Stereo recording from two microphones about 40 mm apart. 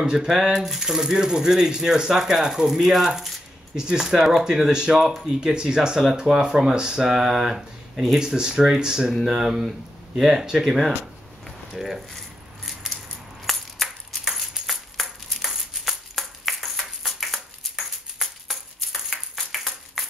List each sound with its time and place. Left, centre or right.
0.0 s speech: right
0.4 s speech: centre
3.7 s speech: centre
13.5 s a sound: centre